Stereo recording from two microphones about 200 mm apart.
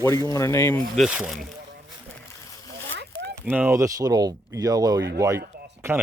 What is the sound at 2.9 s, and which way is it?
Zipper, 60° right (ahead or behind).